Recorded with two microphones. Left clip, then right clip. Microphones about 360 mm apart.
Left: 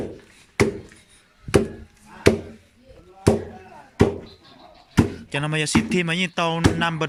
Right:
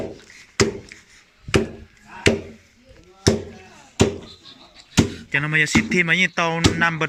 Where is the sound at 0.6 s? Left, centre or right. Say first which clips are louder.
Right 1 dB; centre.